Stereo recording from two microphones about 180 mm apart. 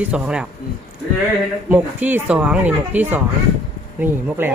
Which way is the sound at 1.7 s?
10° right (ahead or behind).